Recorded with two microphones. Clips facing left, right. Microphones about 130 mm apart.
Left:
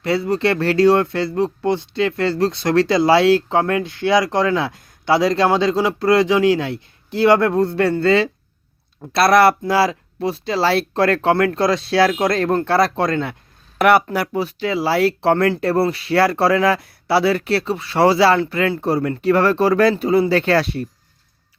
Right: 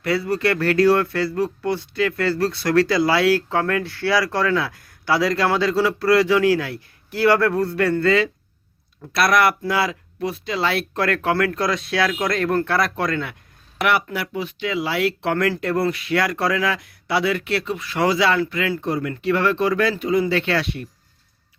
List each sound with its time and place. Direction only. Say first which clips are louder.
0.0 s speech: left 3 dB; 25° left (ahead or behind)
13.7 s speech: left 7 dB; 40° left (ahead or behind)